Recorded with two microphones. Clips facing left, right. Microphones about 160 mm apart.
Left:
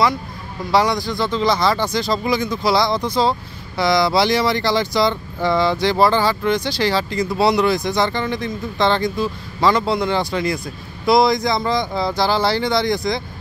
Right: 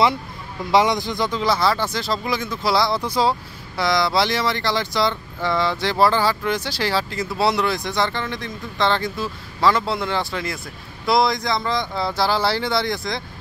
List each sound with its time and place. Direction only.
0.7 s a man's voice: 20° right (ahead or behind)
1.4 s speech: 5° right (ahead or behind)